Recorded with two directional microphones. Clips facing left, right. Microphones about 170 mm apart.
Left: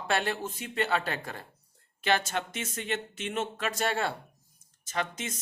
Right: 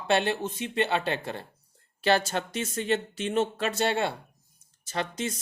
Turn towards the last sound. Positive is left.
turn(degrees=-35)  # may be behind; listen again after turning